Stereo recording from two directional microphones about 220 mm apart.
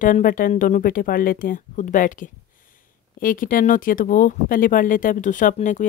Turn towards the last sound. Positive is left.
turn(degrees=35)  # may be behind; listen again after turning